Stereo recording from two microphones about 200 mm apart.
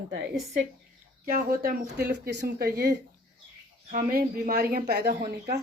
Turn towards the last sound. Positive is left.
turn(degrees=-50)  # may be behind; listen again after turning